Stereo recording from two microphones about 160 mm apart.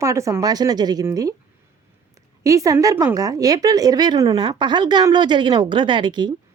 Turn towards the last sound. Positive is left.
turn(degrees=-30)  # may be behind; listen again after turning